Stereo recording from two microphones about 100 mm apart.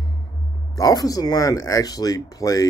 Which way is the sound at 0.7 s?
35° left (ahead or behind).